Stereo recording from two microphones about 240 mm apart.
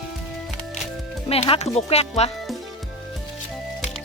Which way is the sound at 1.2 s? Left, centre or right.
Left.